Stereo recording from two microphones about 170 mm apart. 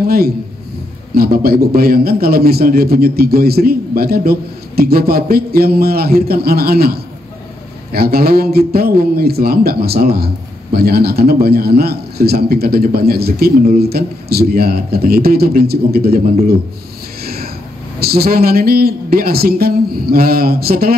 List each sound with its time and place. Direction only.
0.0 s a man's voice: 65° right (ahead or behind)
17.2 s a sound: 65° right (ahead or behind)
17.9 s a man's voice: 65° right (ahead or behind)